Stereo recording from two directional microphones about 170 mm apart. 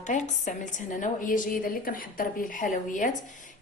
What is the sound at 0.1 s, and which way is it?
Speech, 50° left (ahead or behind).